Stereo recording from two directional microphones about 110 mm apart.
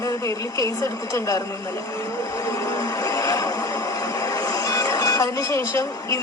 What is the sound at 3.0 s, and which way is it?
Vehicle, 30° left (ahead or behind).